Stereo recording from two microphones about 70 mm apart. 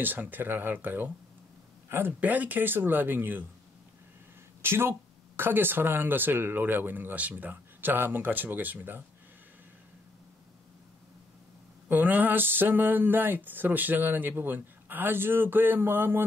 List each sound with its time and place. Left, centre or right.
0.0 s speech: right
4.6 s speech: right
11.9 s speech: right